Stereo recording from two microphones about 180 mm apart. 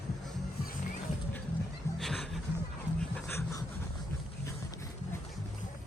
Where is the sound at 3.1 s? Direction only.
15° left (ahead or behind).